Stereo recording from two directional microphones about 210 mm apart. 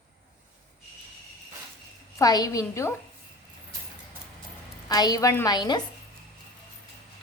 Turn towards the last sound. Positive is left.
turn(degrees=20)  # may be behind; listen again after turning